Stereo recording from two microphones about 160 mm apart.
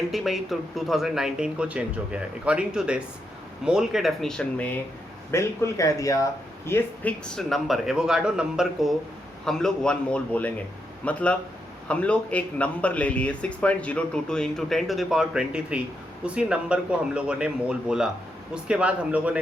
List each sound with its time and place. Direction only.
0.1 s speech: centre (ahead or behind); by 7.1 s 15° left (ahead or behind)
7.3 s speech: centre (ahead or behind)